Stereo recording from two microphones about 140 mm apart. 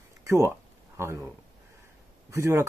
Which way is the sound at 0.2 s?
20° right (ahead or behind).